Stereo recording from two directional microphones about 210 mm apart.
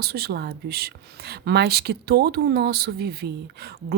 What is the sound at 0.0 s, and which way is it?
Speech, 50° right (ahead or behind).